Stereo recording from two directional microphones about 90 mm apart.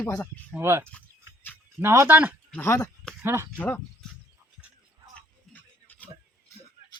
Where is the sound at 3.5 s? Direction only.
20° left (ahead or behind).